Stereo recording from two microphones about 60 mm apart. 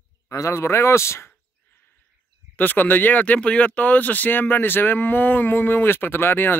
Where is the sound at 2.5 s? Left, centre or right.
Left.